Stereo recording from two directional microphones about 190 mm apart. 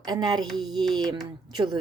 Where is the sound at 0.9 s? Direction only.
20° right (ahead or behind).